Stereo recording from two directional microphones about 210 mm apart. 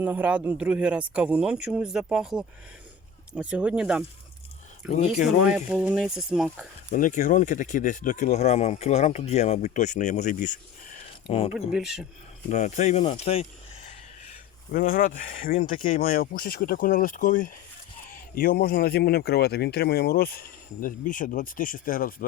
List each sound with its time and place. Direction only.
0.0 s speech: 5° right (ahead or behind)
6.9 s speech: 35° left (ahead or behind)
11.7 s speech: centre (ahead or behind)
12.5 s speech: 35° left (ahead or behind)
14.7 s speech: 45° left (ahead or behind)